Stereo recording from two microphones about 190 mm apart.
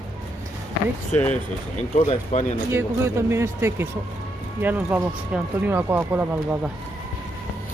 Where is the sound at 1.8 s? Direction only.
35° left (ahead or behind).